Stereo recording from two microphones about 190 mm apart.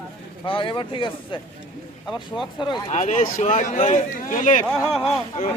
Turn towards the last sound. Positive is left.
turn(degrees=30)  # may be behind; listen again after turning